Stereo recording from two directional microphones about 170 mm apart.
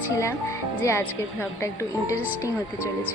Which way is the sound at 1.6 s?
15° left (ahead or behind).